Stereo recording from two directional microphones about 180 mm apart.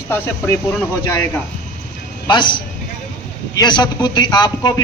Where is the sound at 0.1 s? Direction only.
15° left (ahead or behind).